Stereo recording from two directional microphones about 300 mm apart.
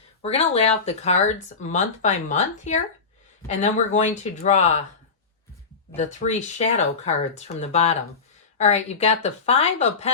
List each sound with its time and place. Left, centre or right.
0.2 s speech: centre
6.0 s speech: left